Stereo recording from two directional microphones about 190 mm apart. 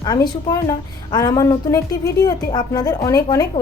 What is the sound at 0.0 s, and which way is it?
A woman's voice, 20° left (ahead or behind).